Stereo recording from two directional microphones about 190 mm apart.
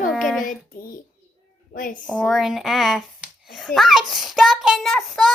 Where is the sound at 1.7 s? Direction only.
45° left (ahead or behind).